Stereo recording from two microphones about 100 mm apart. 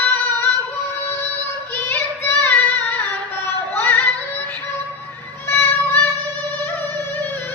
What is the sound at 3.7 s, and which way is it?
Music, 20° left (ahead or behind).